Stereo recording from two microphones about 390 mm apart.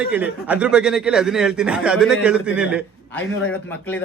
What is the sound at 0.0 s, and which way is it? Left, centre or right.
Speech, centre.